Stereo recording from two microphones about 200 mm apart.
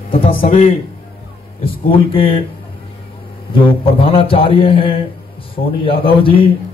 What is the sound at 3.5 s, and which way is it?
A man's voice, 25° left (ahead or behind).